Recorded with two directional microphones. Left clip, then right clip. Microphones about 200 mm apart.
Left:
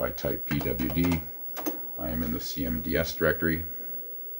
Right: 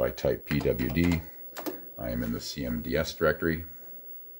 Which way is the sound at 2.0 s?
40° right (ahead or behind).